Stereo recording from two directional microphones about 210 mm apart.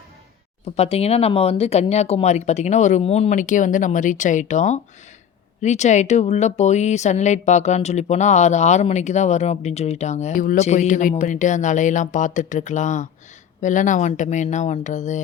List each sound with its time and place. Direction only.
0.8 s speech: 30° left (ahead or behind)